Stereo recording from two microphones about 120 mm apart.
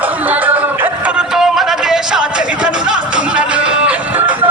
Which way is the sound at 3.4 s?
10° right (ahead or behind).